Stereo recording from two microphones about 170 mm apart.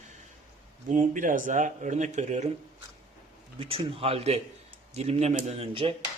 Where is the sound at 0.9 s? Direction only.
50° right (ahead or behind).